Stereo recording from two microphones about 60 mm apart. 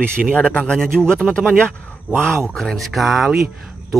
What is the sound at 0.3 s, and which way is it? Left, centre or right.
Speech, centre.